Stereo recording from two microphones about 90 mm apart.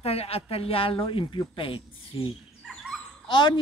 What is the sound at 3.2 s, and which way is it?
Speech, 55° left (ahead or behind).